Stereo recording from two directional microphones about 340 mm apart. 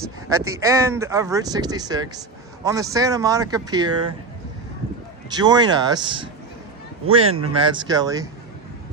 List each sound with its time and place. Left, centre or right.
0.3 s speech: centre
5.3 s speech: centre